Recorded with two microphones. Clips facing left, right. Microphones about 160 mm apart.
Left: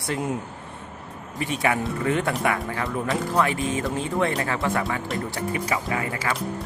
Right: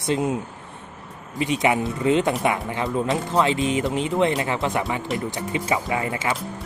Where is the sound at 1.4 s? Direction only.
20° right (ahead or behind).